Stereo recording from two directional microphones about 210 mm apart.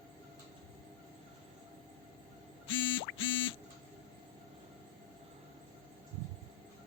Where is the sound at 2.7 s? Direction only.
65° left (ahead or behind).